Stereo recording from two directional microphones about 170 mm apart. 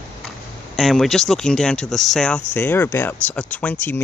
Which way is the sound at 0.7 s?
Centre (ahead or behind).